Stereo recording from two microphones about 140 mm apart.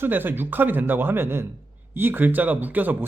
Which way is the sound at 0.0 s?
15° right (ahead or behind).